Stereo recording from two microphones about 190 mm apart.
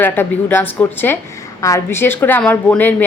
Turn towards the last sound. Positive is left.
turn(degrees=10)  # may be behind; listen again after turning